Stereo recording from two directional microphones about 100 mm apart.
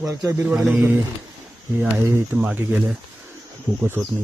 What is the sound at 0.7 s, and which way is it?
Speech, 20° right (ahead or behind).